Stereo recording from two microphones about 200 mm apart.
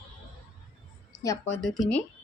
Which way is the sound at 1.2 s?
15° left (ahead or behind).